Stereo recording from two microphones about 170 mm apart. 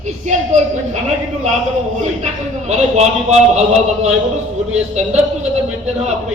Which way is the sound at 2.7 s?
40° right (ahead or behind).